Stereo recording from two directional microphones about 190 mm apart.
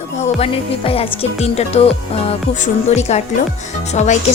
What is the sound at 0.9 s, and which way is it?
Speech, 30° left (ahead or behind).